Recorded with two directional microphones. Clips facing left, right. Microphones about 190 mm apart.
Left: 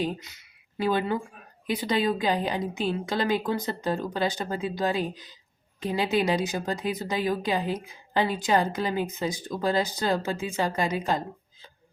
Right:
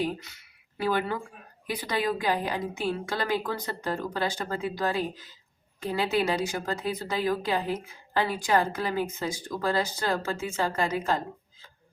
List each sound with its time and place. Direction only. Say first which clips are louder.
0.0 s a woman's voice: even; 20° left (ahead or behind)